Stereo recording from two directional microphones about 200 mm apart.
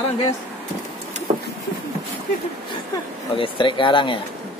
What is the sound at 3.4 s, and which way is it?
Speech, 25° left (ahead or behind).